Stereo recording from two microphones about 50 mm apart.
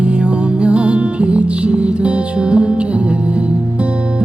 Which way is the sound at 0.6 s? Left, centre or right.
Right.